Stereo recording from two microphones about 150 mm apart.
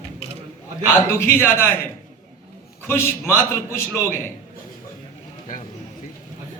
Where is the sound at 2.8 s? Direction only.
15° left (ahead or behind).